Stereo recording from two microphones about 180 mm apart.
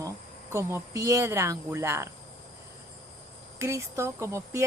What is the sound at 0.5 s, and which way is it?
Speech, 15° right (ahead or behind).